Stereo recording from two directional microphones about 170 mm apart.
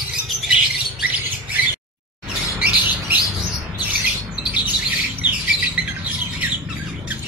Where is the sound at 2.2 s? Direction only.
10° right (ahead or behind).